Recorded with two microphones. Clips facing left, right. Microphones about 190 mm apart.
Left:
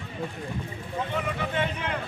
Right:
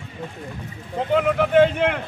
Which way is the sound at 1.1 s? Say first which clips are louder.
Right 15 dB; 75° right (ahead or behind).